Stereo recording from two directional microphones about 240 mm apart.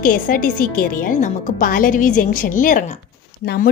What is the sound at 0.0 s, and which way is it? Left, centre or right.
A woman's voice, left.